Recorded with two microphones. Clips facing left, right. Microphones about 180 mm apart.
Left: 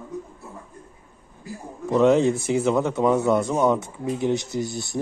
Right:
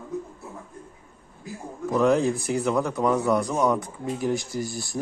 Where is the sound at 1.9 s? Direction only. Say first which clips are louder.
Left 3 dB; 25° left (ahead or behind).